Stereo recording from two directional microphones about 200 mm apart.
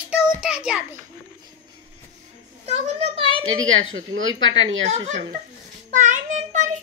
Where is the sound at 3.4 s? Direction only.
80° right.